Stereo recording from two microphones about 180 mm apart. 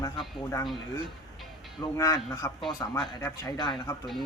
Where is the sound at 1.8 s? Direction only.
20° left (ahead or behind).